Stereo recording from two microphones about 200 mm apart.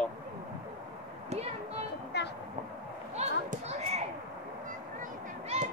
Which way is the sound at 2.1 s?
55° left (ahead or behind).